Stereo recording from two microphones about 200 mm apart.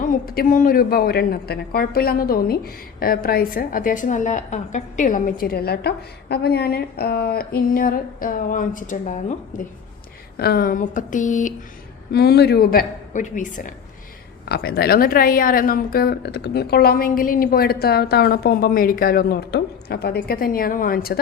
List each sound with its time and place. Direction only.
0.0 s a woman's voice: 45° left (ahead or behind)
10.3 s speech: 50° left (ahead or behind)
12.1 s a woman's voice: 55° left (ahead or behind)
14.4 s a woman's voice: 50° left (ahead or behind)